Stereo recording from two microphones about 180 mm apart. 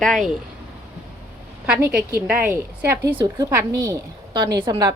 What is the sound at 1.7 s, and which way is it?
A woman's voice, 15° right (ahead or behind).